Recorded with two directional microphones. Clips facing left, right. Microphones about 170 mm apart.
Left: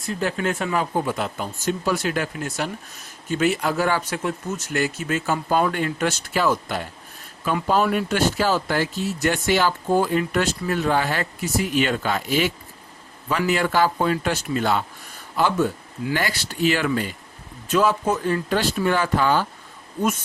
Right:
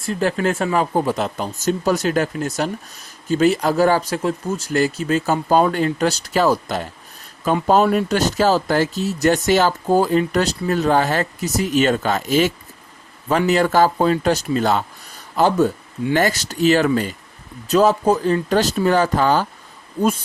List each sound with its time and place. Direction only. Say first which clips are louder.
0.2 s speech: right 5 dB; 40° right (ahead or behind)
20.0 s speech: right 4 dB; 30° right (ahead or behind)